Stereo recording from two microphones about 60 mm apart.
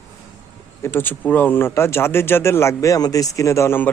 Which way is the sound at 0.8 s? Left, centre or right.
Left.